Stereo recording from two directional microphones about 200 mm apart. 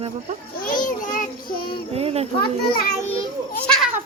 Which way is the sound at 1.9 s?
30° right (ahead or behind).